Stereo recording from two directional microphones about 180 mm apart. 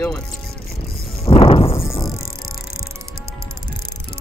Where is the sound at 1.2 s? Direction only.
30° left (ahead or behind).